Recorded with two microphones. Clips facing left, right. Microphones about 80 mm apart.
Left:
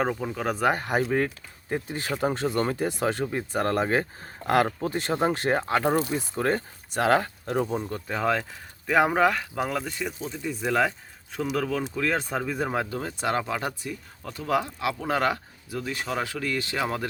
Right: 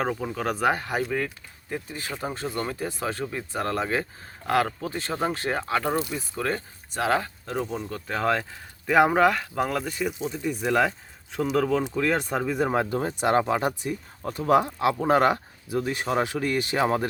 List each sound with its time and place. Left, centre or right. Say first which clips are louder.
0.0 s speech: even; centre
0.8 s speech: left 3 dB; left
4.9 s speech: left 3 dB; centre
7.0 s speech: left 2 dB; left
8.0 s speech: right 2 dB; centre
10.2 s speech: right 3 dB; centre
11.9 s speech: right 2 dB; centre
12.7 s speech: right 4 dB; right